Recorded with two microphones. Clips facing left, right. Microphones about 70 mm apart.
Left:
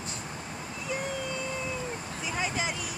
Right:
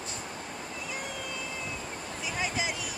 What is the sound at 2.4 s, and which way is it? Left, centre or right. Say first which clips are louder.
Speech: left 1 dB; centre.